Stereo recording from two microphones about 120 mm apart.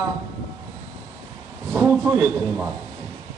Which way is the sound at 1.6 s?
10° right (ahead or behind).